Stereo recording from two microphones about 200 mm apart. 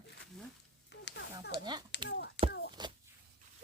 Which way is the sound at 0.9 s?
60° left (ahead or behind).